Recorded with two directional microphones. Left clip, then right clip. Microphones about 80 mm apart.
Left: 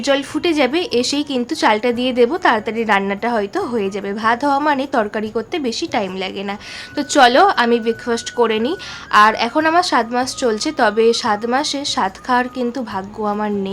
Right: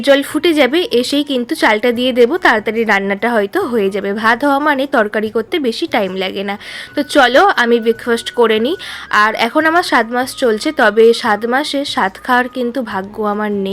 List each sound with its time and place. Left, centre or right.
0.0 s speech: right
6.9 s a woman's voice: right